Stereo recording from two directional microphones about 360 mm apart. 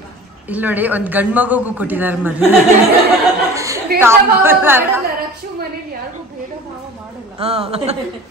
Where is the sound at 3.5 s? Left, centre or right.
Centre.